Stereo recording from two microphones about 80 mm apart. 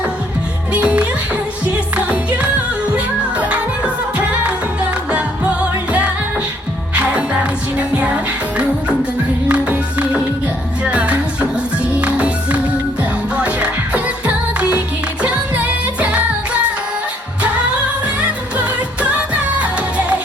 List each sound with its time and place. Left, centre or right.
0.7 s music: centre
2.9 s music: centre
6.9 s music: centre
9.5 s music: centre
15.2 s music: centre